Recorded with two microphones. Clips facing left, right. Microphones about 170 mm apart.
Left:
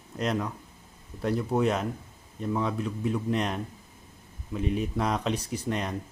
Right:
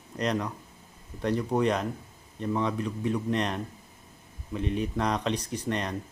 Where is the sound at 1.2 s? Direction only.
5° left (ahead or behind).